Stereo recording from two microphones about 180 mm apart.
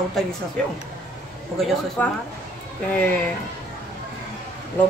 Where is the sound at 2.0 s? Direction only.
5° left (ahead or behind).